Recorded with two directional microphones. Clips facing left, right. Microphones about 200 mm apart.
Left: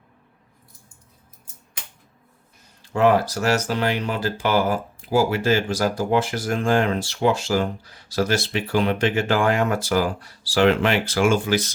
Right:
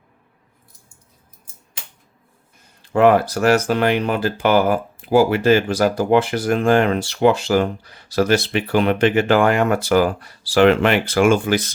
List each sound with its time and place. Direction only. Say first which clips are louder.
2.9 s speech: right 4 dB; 55° right (ahead or behind)